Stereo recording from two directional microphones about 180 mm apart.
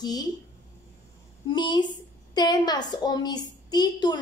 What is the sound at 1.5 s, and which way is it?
A woman's voice, 25° left (ahead or behind).